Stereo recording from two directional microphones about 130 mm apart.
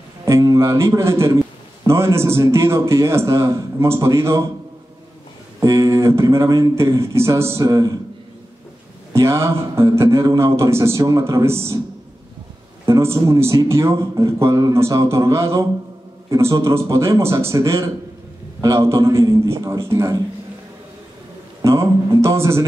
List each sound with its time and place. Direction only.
0.2 s a man's voice: 25° right (ahead or behind)
5.6 s a man's voice: 25° right (ahead or behind)
9.1 s a man's voice: 20° right (ahead or behind)
12.8 s a man's voice: 20° right (ahead or behind)
21.5 s speech: 20° right (ahead or behind)